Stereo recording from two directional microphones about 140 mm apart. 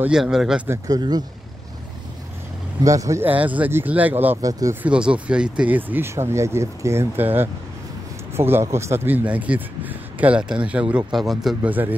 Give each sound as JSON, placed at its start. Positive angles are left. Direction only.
{"t": 0.0, "sound": "speech", "side_deg": -5}
{"t": 0.7, "sound": "speech", "side_deg": -25}
{"t": 2.8, "sound": "a man's voice", "side_deg": -25}
{"t": 4.4, "sound": "speech", "side_deg": -25}
{"t": 4.8, "sound": "a man's voice", "side_deg": -10}